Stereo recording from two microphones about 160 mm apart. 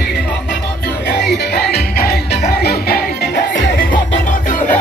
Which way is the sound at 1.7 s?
75° left (ahead or behind).